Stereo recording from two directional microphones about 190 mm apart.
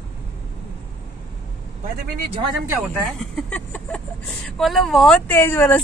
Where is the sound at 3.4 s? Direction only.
5° left (ahead or behind).